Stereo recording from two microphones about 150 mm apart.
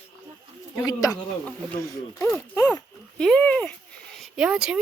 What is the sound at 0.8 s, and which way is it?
Speech, 25° left (ahead or behind).